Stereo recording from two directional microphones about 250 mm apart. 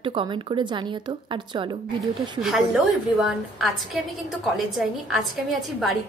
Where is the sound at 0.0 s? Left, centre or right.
Right.